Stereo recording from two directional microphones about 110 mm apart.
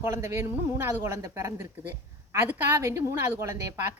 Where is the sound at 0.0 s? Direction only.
25° right (ahead or behind).